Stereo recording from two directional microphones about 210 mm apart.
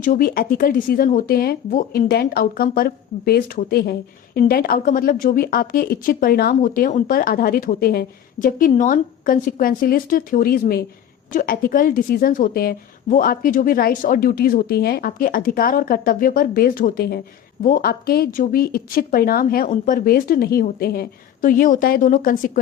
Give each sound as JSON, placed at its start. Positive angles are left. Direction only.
{"t": 0.0, "sound": "a woman's voice", "side_deg": 40}